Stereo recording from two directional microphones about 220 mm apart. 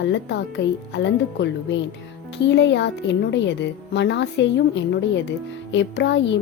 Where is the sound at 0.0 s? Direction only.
55° left (ahead or behind).